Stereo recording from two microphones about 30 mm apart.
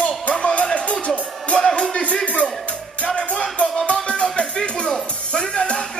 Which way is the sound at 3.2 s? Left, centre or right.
Left.